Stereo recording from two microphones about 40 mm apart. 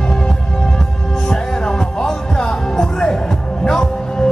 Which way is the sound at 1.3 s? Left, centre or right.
Left.